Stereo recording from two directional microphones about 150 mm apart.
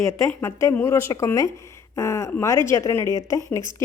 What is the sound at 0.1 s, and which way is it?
Speech, 20° left (ahead or behind).